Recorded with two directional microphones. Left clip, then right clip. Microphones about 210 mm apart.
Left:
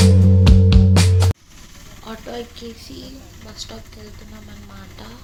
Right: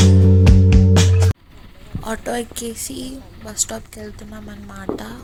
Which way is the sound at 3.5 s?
45° right (ahead or behind).